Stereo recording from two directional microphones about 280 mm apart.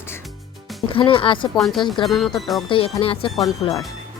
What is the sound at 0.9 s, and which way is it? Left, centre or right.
Speech, centre.